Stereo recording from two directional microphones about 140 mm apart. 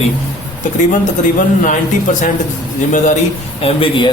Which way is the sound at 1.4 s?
65° left (ahead or behind).